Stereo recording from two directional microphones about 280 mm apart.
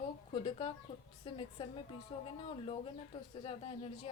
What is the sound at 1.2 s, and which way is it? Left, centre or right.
Speech, centre.